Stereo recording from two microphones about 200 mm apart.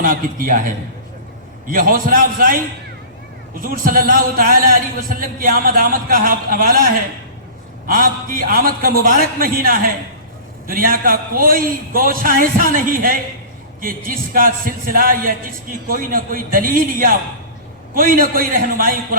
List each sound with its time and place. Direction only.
0.0 s a man's voice: 45° right (ahead or behind)
7.9 s a man's voice: 45° right (ahead or behind)